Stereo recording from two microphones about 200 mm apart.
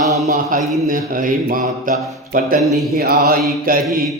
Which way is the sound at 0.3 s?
45° right (ahead or behind).